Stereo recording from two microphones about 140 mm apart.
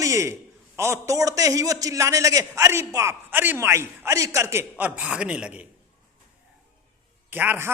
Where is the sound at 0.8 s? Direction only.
20° right (ahead or behind).